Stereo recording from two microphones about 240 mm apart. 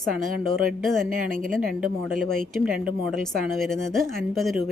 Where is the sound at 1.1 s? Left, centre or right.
Right.